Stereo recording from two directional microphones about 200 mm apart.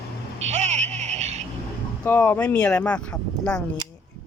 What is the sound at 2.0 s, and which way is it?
Speech, 10° left (ahead or behind).